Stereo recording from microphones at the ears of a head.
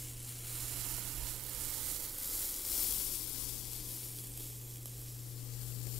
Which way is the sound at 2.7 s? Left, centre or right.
Left.